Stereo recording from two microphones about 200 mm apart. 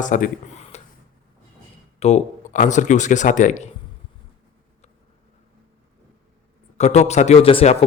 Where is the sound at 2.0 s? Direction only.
35° left (ahead or behind).